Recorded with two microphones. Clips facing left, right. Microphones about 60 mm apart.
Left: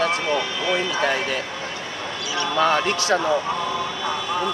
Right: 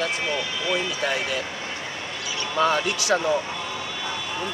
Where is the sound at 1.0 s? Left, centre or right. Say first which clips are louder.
Left 4 dB; left.